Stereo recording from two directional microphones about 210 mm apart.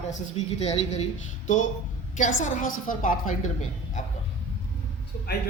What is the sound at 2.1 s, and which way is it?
A woman's voice, 35° left (ahead or behind).